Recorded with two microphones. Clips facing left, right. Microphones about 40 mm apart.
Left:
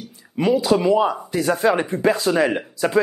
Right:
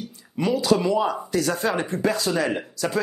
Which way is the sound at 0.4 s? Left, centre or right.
Centre.